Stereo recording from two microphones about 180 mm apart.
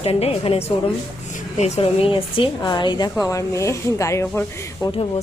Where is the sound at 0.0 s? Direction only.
35° left (ahead or behind); by 4.9 s 15° left (ahead or behind).